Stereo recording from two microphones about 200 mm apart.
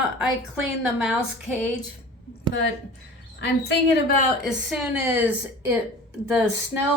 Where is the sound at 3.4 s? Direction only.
55° left (ahead or behind).